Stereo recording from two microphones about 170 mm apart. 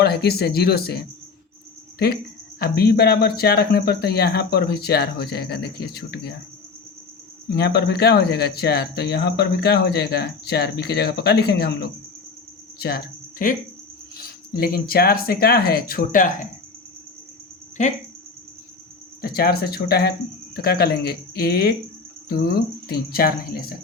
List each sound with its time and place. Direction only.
0.0 s speech: 70° left (ahead or behind)
2.6 s speech: 65° left (ahead or behind)
7.5 s speech: 70° left (ahead or behind)
13.4 s speech: 55° left (ahead or behind)
17.8 s speech: 45° left (ahead or behind)
19.2 s speech: 60° left (ahead or behind)